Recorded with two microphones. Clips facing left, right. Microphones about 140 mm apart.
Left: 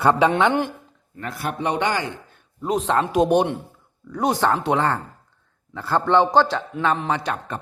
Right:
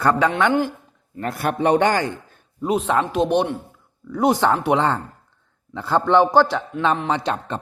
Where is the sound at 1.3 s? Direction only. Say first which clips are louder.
Right 6 dB; 55° right (ahead or behind).